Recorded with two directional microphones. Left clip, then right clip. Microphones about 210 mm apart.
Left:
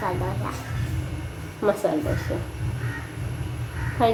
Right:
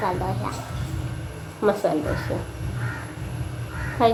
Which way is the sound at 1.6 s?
Centre (ahead or behind).